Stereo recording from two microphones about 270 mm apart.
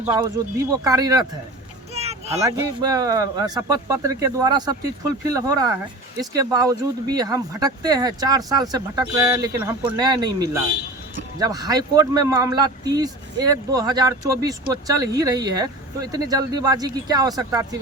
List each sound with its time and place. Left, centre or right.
0.0 s speech: centre
2.0 s a sound: right
2.4 s speech: centre